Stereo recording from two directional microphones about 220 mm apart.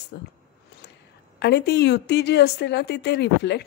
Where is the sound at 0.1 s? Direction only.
50° left (ahead or behind).